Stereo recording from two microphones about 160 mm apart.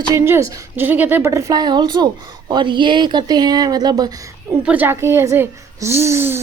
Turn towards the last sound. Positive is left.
turn(degrees=-15)  # may be behind; listen again after turning